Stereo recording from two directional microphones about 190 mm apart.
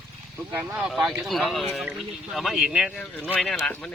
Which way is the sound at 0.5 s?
5° right (ahead or behind).